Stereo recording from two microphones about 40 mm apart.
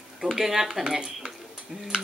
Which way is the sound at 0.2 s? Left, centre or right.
Centre.